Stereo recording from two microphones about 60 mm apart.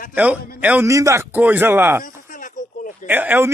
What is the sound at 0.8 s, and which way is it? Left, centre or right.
Speech, right.